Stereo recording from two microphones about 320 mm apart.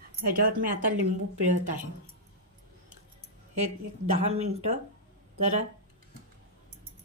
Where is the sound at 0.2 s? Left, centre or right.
Right.